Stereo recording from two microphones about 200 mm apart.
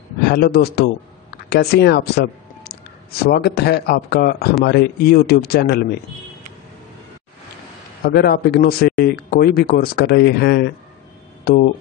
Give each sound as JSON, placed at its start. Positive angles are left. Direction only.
{"t": 0.3, "sound": "a man's voice", "side_deg": 50}
{"t": 8.0, "sound": "a man's voice", "side_deg": 50}